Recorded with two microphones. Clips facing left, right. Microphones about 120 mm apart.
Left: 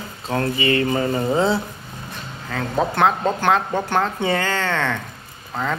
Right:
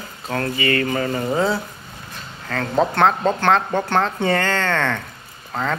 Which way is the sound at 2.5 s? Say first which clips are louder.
Right 2 dB; 10° left (ahead or behind).